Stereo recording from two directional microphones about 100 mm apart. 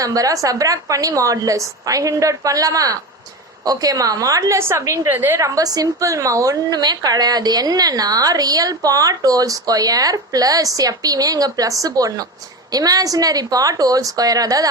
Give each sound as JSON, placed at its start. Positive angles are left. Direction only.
{"t": 0.0, "sound": "a woman's voice", "side_deg": -35}
{"t": 5.5, "sound": "a woman's voice", "side_deg": -40}